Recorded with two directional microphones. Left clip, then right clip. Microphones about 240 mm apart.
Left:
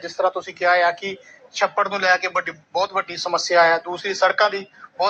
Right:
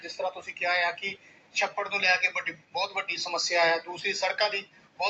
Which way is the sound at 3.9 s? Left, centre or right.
Centre.